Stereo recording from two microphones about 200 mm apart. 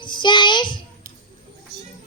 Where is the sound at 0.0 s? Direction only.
25° left (ahead or behind).